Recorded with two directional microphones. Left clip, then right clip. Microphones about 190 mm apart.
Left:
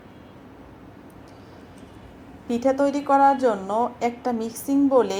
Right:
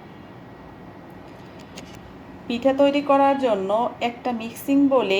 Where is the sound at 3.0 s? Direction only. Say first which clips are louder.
Even; 40° left (ahead or behind).